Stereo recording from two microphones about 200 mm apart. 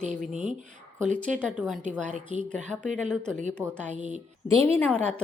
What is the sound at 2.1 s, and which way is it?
Speech, 35° right (ahead or behind).